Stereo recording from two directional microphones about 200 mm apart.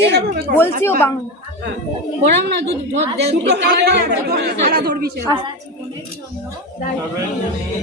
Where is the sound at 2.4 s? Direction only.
60° right (ahead or behind).